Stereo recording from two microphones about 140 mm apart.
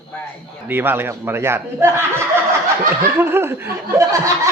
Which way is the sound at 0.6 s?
15° right (ahead or behind).